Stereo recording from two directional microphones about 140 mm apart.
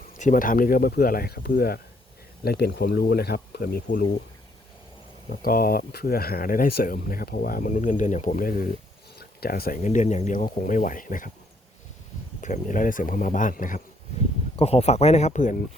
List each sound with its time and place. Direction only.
0.2 s speech: 70° left (ahead or behind); by 3.9 s 90° left
5.3 s speech: 90° left; by 11.3 s 75° left (ahead or behind)
12.4 s speech: 65° left (ahead or behind)
14.5 s speech: 45° left (ahead or behind)